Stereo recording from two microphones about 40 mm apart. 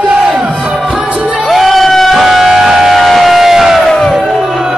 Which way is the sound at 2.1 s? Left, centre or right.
Centre.